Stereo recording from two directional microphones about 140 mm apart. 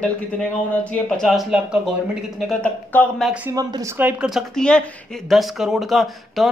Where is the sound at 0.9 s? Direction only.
5° left (ahead or behind).